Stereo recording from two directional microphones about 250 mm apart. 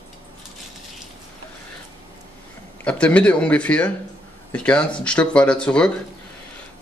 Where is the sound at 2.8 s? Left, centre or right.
Centre.